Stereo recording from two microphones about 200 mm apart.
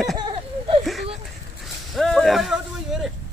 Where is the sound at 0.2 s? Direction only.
25° right (ahead or behind).